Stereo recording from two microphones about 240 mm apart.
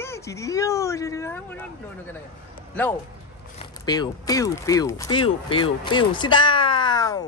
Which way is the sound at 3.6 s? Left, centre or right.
Centre.